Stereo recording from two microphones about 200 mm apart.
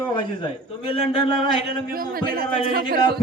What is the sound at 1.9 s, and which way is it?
A man's voice, 50° right (ahead or behind).